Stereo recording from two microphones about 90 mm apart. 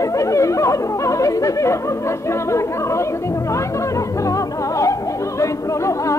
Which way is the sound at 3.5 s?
35° left (ahead or behind).